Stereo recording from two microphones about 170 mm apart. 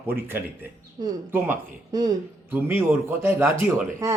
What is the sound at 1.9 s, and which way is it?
Speech, 20° right (ahead or behind).